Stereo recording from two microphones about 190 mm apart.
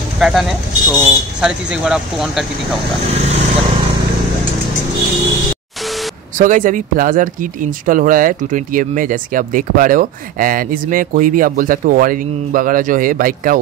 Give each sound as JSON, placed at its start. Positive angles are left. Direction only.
{"t": 0.2, "sound": "speech", "side_deg": 0}
{"t": 6.3, "sound": "speech", "side_deg": -45}